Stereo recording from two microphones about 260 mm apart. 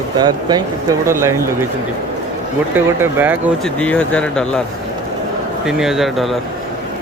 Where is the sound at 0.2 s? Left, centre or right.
Centre.